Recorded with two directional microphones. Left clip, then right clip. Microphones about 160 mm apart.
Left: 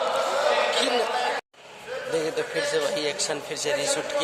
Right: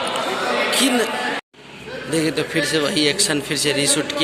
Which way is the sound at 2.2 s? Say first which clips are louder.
Right 8 dB; 5° left (ahead or behind).